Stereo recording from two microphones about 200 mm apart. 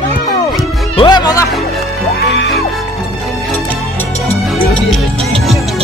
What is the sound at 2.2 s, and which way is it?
Music, 60° left (ahead or behind).